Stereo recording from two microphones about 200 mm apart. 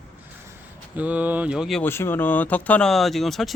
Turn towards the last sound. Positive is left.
turn(degrees=0)  # may be behind; listen again after turning